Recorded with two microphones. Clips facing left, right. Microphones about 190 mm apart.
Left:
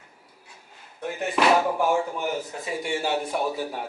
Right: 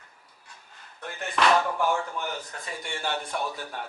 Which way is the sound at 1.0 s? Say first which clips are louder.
Left 3 dB; 5° left (ahead or behind).